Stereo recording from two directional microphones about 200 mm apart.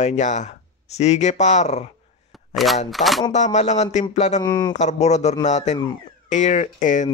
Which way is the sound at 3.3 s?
35° left (ahead or behind).